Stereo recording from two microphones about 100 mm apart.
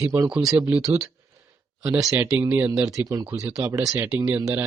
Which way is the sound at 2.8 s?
35° right (ahead or behind).